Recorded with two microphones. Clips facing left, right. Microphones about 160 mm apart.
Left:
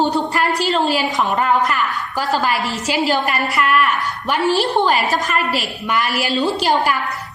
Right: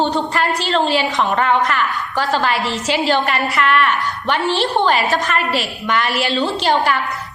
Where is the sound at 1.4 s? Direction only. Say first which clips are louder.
Even; 5° left (ahead or behind).